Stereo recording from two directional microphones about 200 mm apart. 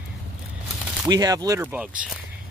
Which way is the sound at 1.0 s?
20° right (ahead or behind).